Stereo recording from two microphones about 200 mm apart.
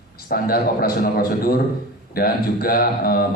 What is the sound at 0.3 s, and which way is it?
A man's voice, 45° left (ahead or behind).